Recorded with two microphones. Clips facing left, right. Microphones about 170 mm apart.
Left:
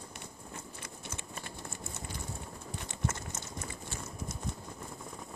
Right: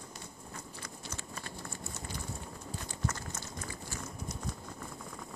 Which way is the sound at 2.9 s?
25° left (ahead or behind).